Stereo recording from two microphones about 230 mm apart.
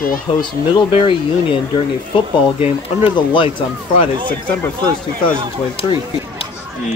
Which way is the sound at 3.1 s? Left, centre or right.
Left.